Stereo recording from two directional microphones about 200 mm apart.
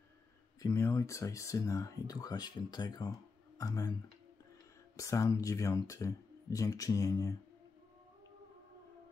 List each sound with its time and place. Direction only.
0.6 s speech: 15° left (ahead or behind)
4.9 s speech: 15° left (ahead or behind)